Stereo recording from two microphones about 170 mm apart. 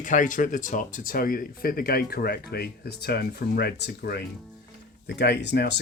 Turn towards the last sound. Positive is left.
turn(degrees=80)